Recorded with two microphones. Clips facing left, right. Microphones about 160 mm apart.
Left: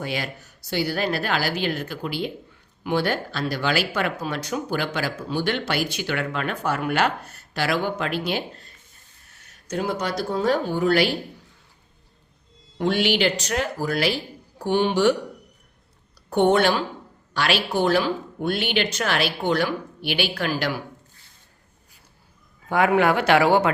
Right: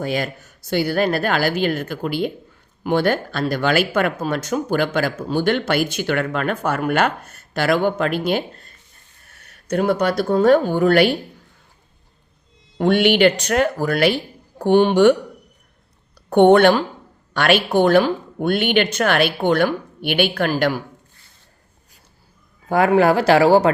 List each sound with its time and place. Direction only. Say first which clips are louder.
0.0 s speech: right 6 dB; 45° right (ahead or behind)
9.3 s speech: right 7 dB; 60° right (ahead or behind)
12.7 s speech: right 6 dB; 55° right (ahead or behind)
16.3 s speech: right 7 dB; 60° right (ahead or behind)
22.7 s speech: right 4 dB; 35° right (ahead or behind)